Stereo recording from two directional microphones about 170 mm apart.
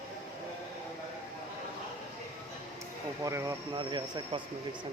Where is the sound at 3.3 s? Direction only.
20° right (ahead or behind).